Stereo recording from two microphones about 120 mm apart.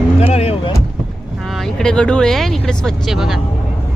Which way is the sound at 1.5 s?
Centre (ahead or behind).